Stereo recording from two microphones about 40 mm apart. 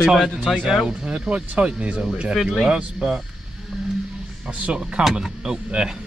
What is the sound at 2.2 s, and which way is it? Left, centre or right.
Speech, centre.